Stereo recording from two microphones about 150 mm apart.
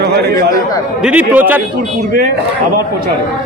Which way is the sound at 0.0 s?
90° right.